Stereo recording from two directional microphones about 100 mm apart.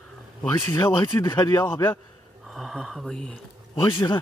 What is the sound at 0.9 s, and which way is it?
Speech, 45° left (ahead or behind).